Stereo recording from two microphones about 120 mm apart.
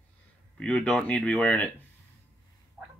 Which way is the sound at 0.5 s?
10° left (ahead or behind).